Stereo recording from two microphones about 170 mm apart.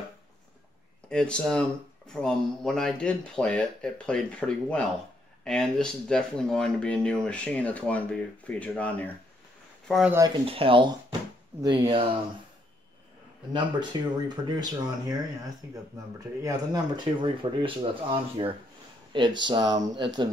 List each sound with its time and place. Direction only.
1.0 s speech: 5° left (ahead or behind)
10.1 s speech: 20° right (ahead or behind)
10.4 s speech: 35° right (ahead or behind)
13.9 s speech: 20° right (ahead or behind)